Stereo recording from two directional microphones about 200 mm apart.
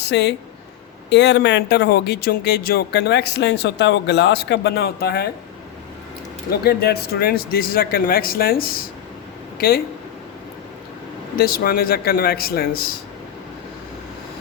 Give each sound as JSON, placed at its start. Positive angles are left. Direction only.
{"t": 0.0, "sound": "speech", "side_deg": 60}
{"t": 6.5, "sound": "speech", "side_deg": 50}
{"t": 11.3, "sound": "speech", "side_deg": 50}